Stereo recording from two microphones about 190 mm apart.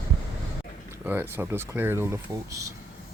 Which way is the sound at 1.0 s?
10° right (ahead or behind).